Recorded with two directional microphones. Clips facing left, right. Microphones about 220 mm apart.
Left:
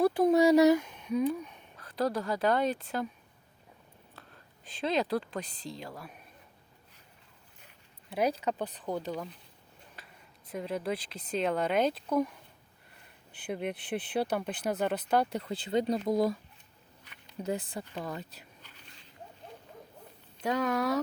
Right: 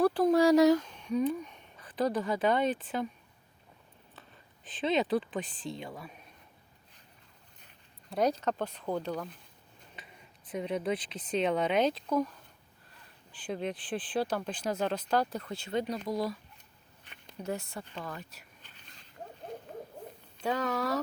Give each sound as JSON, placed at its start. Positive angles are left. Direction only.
{"t": 0.0, "sound": "speech", "side_deg": 10}
{"t": 4.6, "sound": "speech", "side_deg": 0}
{"t": 8.1, "sound": "speech", "side_deg": 10}
{"t": 10.5, "sound": "speech", "side_deg": 0}
{"t": 13.5, "sound": "speech", "side_deg": 10}
{"t": 15.3, "sound": "speech", "side_deg": 25}
{"t": 16.0, "sound": "speech", "side_deg": 50}
{"t": 17.4, "sound": "speech", "side_deg": 20}
{"t": 20.4, "sound": "speech", "side_deg": 10}